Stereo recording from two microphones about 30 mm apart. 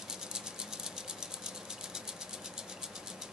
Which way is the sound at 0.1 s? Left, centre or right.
Right.